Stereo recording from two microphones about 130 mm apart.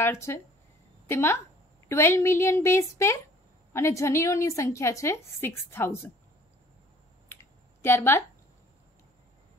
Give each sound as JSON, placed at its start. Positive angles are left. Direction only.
{"t": 0.0, "sound": "a woman's voice", "side_deg": 20}
{"t": 7.8, "sound": "a woman's voice", "side_deg": 20}